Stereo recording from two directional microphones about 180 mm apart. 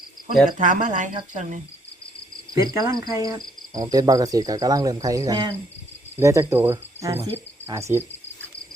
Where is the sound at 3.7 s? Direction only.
20° right (ahead or behind).